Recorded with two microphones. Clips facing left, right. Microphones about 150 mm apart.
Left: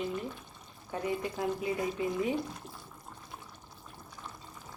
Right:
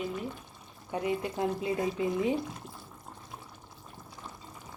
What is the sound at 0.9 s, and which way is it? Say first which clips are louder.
Speech: right 2 dB; 20° right (ahead or behind).